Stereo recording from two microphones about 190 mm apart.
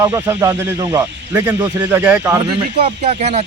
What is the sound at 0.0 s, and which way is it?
Speech, 20° right (ahead or behind).